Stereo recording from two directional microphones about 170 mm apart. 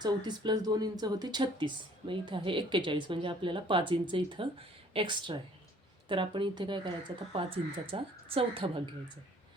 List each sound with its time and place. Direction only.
0.0 s a woman's voice: 25° right (ahead or behind)